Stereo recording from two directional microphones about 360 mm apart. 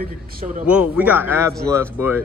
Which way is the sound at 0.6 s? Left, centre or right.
Centre.